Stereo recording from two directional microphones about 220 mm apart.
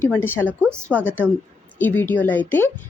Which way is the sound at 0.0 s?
10° left (ahead or behind).